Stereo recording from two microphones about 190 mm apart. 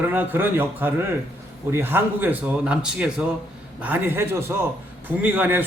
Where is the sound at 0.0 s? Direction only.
10° right (ahead or behind).